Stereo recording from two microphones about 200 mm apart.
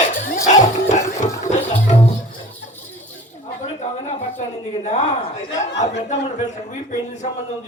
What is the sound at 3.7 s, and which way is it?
A man's voice, 35° left (ahead or behind).